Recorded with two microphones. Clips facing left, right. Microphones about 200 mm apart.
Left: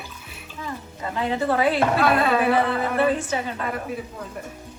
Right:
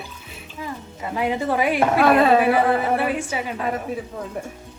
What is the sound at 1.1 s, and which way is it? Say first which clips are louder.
Speech: right 1 dB; 15° right (ahead or behind).